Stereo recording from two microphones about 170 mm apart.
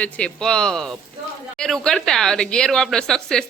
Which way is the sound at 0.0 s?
5° left (ahead or behind).